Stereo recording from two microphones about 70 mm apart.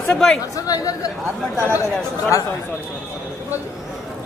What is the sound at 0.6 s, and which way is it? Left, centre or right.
Chatter, left.